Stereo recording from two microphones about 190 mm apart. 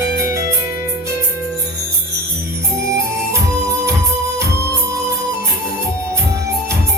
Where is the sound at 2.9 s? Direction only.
15° right (ahead or behind).